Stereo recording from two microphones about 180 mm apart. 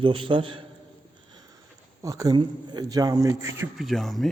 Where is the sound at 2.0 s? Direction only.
20° right (ahead or behind).